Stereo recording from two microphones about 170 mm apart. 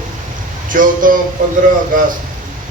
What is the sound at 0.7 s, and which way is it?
A man's voice, 50° right (ahead or behind).